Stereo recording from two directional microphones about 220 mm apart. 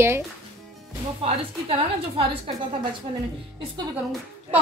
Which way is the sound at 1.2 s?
25° right (ahead or behind).